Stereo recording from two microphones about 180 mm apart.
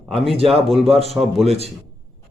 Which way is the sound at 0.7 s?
Centre (ahead or behind).